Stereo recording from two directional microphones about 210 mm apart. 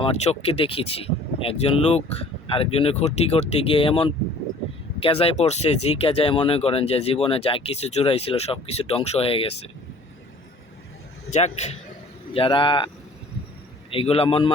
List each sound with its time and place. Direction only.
0.0 s speech: 30° left (ahead or behind)
11.3 s a man's voice: 30° left (ahead or behind)
13.9 s speech: 25° left (ahead or behind)